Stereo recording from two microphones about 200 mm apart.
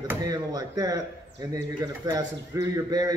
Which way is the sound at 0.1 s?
20° right (ahead or behind).